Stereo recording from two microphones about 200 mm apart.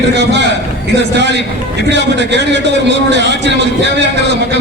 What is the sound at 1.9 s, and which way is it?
A man's voice, 60° right (ahead or behind).